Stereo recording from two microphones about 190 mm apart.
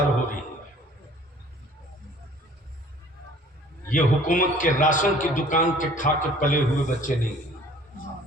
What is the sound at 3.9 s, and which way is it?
A man's voice, 45° left (ahead or behind).